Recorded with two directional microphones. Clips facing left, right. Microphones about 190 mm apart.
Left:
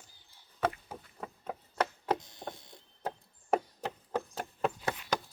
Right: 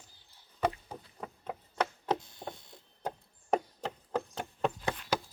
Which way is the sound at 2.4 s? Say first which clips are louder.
Even; 10° right (ahead or behind).